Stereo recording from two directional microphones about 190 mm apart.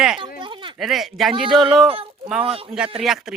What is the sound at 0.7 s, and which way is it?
A child's voice, centre (ahead or behind).